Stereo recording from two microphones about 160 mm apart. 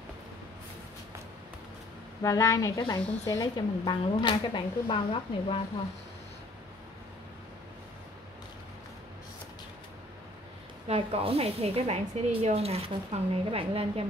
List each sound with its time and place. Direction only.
2.2 s speech: 20° left (ahead or behind)
10.9 s speech: 35° right (ahead or behind)